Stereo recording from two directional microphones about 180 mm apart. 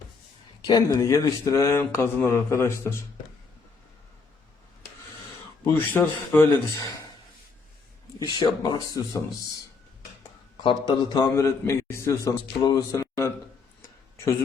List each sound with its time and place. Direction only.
0.6 s speech: 20° left (ahead or behind)
5.6 s speech: 10° left (ahead or behind)
8.2 s a man's voice: 25° left (ahead or behind)
10.6 s a man's voice: 25° left (ahead or behind)